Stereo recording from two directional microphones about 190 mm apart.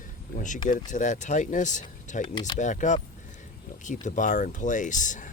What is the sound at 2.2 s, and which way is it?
Speech, 20° left (ahead or behind).